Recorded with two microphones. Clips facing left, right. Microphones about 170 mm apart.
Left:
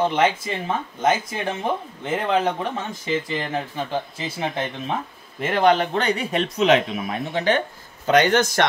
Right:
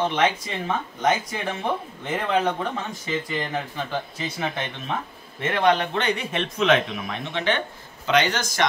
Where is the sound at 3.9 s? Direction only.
30° left (ahead or behind).